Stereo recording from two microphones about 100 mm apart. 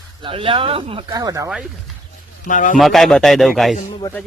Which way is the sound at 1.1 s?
40° right (ahead or behind).